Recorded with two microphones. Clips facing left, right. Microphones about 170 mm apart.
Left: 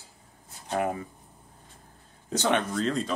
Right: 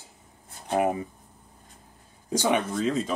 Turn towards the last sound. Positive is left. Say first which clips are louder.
# right 2 dB
turn(degrees=-5)  # may be behind; listen again after turning